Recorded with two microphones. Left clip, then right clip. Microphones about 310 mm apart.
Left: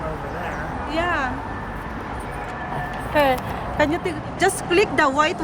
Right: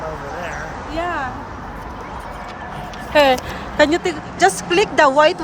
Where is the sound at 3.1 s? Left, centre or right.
Right.